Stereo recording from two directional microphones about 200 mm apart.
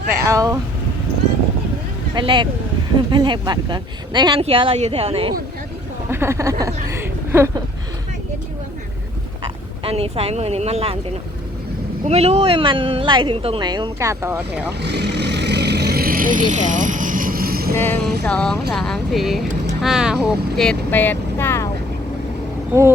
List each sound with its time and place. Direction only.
0.1 s speech: 15° right (ahead or behind)
2.1 s speech: 25° right (ahead or behind)
6.1 s speech: 10° right (ahead or behind)
9.8 s speech: 30° right (ahead or behind)
12.0 s speech: 30° right (ahead or behind); by 14.7 s 10° right (ahead or behind)
14.8 s vehicle: 60° right (ahead or behind)
17.7 s music: 10° left (ahead or behind)
18.3 s speech: 5° left (ahead or behind)